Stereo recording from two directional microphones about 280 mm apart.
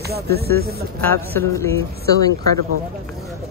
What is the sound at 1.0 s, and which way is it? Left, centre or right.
Speech, centre.